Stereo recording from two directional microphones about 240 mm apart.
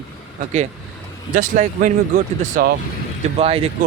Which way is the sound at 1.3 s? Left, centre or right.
Right.